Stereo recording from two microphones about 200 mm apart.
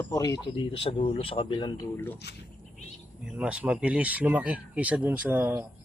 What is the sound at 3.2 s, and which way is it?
Speech, 5° right (ahead or behind).